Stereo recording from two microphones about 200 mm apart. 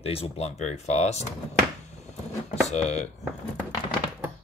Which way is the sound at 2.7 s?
35° left (ahead or behind).